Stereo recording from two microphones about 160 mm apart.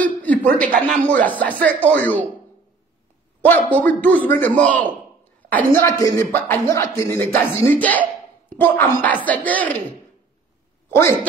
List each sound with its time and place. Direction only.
0.0 s a sound: 10° left (ahead or behind)
0.7 s speech: 5° left (ahead or behind)
3.4 s speech: 10° left (ahead or behind)
10.9 s speech: 15° left (ahead or behind)